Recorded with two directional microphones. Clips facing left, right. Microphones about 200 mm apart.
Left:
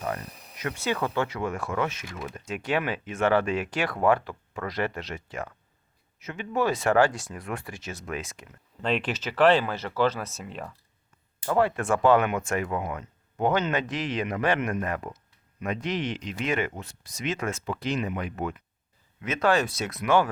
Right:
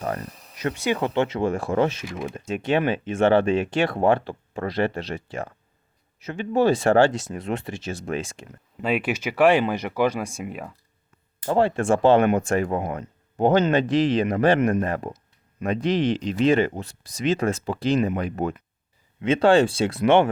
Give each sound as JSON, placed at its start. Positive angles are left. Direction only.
{"t": 0.8, "sound": "speech", "side_deg": -20}
{"t": 8.8, "sound": "speech", "side_deg": -10}
{"t": 11.4, "sound": "speech", "side_deg": -30}